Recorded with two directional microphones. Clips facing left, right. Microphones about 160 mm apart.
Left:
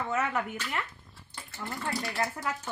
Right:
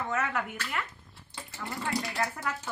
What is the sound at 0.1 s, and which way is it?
Speech, 20° left (ahead or behind).